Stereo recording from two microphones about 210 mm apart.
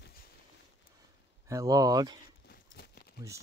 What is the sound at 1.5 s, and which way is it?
Speech, 15° right (ahead or behind).